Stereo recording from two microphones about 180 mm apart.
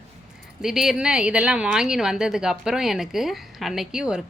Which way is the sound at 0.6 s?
Centre (ahead or behind).